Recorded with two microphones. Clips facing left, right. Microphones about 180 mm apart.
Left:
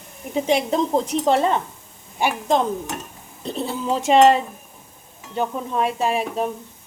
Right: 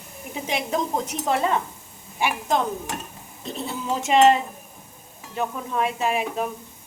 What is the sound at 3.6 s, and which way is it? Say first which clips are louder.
Speech: left 5 dB; 35° left (ahead or behind).